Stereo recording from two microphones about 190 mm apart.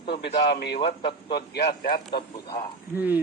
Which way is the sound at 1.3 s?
55° left (ahead or behind).